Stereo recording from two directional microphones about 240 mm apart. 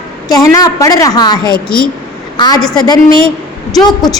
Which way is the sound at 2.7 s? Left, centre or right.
Centre.